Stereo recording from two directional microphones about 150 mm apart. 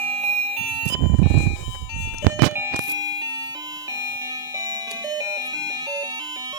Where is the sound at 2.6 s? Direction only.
20° right (ahead or behind).